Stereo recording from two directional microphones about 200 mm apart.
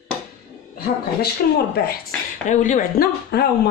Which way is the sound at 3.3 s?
55° left (ahead or behind).